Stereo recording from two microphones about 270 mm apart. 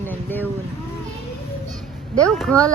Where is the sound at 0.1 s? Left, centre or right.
Centre.